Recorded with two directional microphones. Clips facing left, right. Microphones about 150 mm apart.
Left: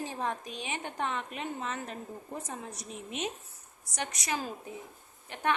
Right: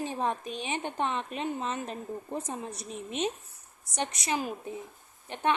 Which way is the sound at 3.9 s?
25° right (ahead or behind).